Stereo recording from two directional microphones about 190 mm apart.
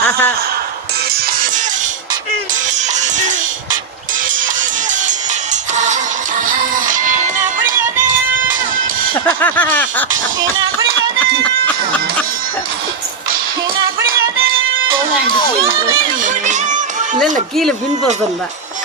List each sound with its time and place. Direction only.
0.0 s a sound: 10° left (ahead or behind)
1.1 s music: 45° right (ahead or behind)
2.9 s music: 40° right (ahead or behind)
5.7 s music: 40° right (ahead or behind)
9.1 s a sound: 10° left (ahead or behind)
16.2 s music: 40° right (ahead or behind)
17.6 s speech: 5° left (ahead or behind)